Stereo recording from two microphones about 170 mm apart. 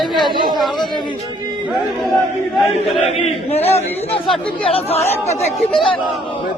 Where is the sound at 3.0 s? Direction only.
35° left (ahead or behind).